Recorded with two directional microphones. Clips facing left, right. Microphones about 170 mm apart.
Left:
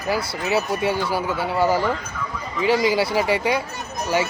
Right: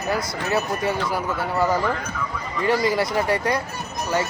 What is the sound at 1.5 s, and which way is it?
Speech, 30° left (ahead or behind).